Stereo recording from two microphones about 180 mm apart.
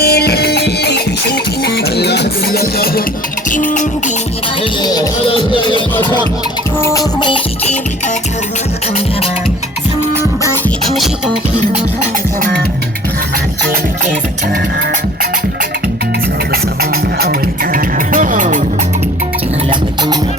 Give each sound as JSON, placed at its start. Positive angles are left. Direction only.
{"t": 0.0, "sound": "music", "side_deg": 60}
{"t": 3.5, "sound": "music", "side_deg": 45}
{"t": 4.6, "sound": "music", "side_deg": 20}
{"t": 6.7, "sound": "music", "side_deg": 15}
{"t": 10.8, "sound": "music", "side_deg": 0}
{"t": 17.2, "sound": "music", "side_deg": -55}